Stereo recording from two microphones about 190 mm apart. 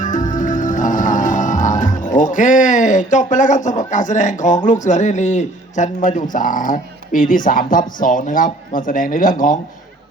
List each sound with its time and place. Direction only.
0.0 s music: 40° left (ahead or behind)